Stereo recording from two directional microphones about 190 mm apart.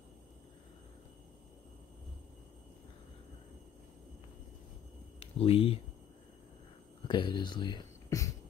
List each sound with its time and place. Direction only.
5.2 s speech: 30° left (ahead or behind)
7.1 s speech: 25° left (ahead or behind)